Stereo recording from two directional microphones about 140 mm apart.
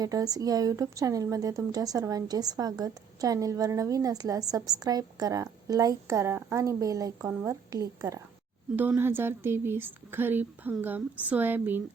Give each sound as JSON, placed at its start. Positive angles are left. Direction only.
{"t": 0.0, "sound": "a woman's voice", "side_deg": -25}
{"t": 8.7, "sound": "a woman's voice", "side_deg": -15}